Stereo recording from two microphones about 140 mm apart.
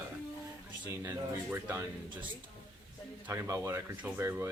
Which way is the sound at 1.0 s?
15° right (ahead or behind).